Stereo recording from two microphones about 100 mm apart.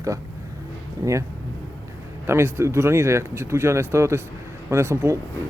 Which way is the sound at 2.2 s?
25° right (ahead or behind).